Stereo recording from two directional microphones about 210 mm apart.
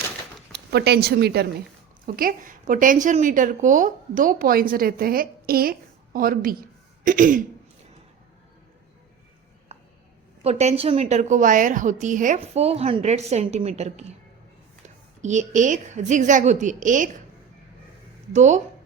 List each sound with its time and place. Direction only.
0.5 s a woman's voice: 50° right (ahead or behind)
7.0 s throat clearing: 40° right (ahead or behind)
10.4 s a woman's voice: 30° right (ahead or behind)
15.2 s a woman's voice: 35° right (ahead or behind)
18.3 s a woman's voice: 35° right (ahead or behind)